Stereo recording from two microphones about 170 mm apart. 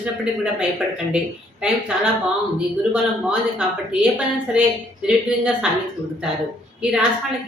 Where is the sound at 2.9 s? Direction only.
5° right (ahead or behind).